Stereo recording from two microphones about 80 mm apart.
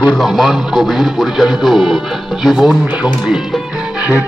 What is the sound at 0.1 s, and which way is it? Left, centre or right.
Speech, centre.